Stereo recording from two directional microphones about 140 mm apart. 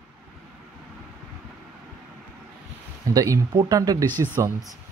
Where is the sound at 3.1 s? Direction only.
25° right (ahead or behind).